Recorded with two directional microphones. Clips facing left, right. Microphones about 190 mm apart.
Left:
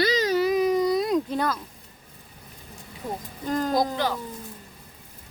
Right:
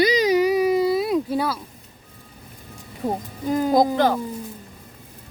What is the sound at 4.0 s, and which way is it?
Speech, 50° right (ahead or behind).